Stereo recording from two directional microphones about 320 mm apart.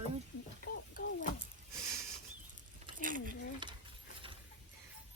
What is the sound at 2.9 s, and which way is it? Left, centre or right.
Speech, right.